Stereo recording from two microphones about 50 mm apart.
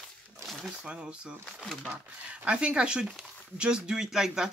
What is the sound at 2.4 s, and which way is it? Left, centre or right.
Speech, right.